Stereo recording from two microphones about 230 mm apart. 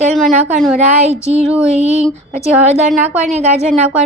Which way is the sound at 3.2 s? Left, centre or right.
Right.